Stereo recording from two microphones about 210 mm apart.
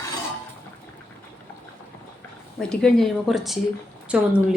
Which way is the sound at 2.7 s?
5° left (ahead or behind).